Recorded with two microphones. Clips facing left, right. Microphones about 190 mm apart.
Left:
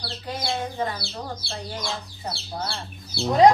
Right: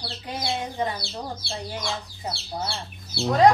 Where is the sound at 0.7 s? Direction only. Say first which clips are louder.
Even; 15° right (ahead or behind).